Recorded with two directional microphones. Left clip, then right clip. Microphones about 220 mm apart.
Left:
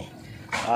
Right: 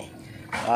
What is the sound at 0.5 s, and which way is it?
Dog, 50° left (ahead or behind).